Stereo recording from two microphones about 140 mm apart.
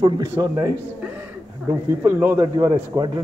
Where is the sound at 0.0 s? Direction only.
30° right (ahead or behind).